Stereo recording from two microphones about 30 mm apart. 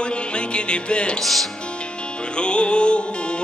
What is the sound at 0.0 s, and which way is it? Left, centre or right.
Music, left.